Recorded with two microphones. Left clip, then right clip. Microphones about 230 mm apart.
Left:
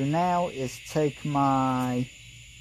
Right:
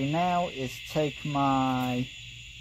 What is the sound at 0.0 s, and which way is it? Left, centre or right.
Owl, left.